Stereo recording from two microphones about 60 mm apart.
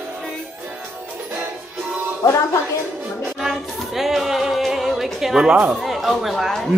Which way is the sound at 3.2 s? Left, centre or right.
Centre.